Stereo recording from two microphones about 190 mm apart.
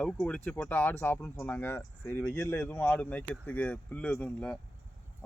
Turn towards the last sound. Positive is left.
turn(degrees=5)  # may be behind; listen again after turning